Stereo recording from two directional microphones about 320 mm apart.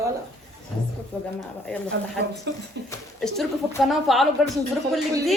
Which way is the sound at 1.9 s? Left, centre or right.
Right.